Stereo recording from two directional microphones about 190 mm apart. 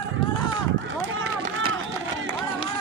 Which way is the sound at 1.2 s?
90° right.